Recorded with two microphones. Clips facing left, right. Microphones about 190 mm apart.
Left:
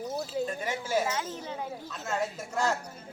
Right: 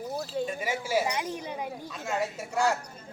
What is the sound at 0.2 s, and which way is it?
Speech, centre (ahead or behind).